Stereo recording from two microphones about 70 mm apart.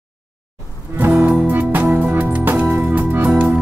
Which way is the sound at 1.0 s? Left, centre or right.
Right.